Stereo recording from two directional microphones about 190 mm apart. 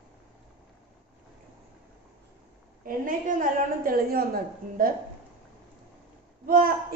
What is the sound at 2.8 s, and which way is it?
A woman's voice, 45° right (ahead or behind).